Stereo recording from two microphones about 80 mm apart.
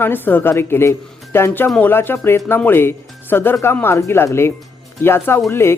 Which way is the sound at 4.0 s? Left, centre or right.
Left.